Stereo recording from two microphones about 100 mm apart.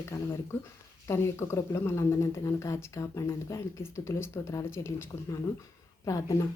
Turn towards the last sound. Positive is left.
turn(degrees=35)  # may be behind; listen again after turning